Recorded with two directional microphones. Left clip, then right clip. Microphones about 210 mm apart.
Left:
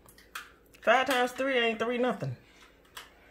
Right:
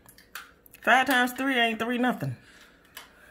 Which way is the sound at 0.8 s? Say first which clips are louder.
Right 3 dB; 15° right (ahead or behind).